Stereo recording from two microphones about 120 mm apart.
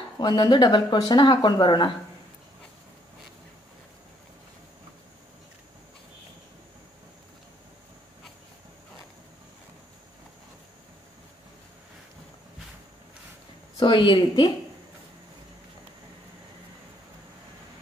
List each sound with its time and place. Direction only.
0.2 s speech: 40° left (ahead or behind)
13.7 s speech: 40° left (ahead or behind)